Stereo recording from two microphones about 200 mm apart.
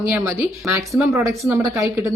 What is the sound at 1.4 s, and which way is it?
Speech, 15° right (ahead or behind).